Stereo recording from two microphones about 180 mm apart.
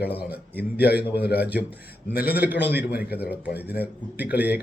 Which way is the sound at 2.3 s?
10° right (ahead or behind).